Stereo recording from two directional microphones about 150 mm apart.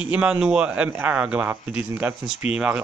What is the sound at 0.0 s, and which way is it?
Speech, 5° right (ahead or behind).